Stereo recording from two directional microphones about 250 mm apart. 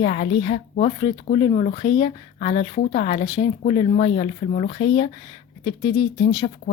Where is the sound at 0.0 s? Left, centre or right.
Left.